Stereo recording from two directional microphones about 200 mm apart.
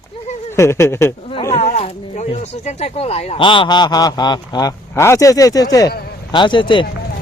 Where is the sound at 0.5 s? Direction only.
15° left (ahead or behind).